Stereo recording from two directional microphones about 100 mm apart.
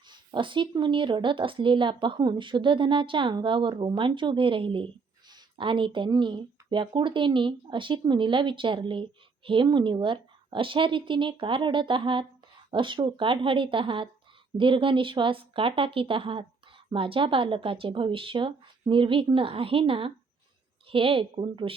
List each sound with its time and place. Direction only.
0.1 s speech: 55° right (ahead or behind)